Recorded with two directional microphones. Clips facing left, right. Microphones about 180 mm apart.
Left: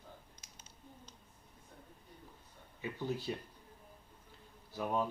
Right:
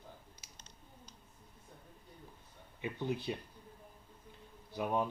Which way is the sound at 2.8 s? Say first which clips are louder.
Right 1 dB; 20° right (ahead or behind).